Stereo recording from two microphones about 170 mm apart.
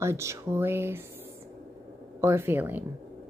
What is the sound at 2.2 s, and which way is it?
Speech, 15° right (ahead or behind).